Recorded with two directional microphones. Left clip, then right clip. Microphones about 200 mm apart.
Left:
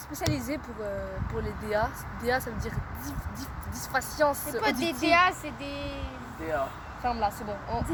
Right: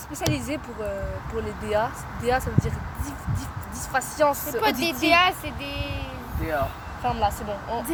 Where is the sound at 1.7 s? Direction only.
20° left (ahead or behind).